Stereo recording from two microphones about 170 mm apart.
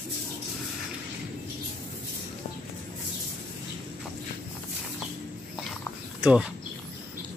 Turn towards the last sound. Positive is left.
turn(degrees=-5)  # may be behind; listen again after turning